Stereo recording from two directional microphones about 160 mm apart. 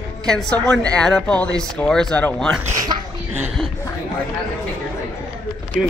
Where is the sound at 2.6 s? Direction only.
20° right (ahead or behind).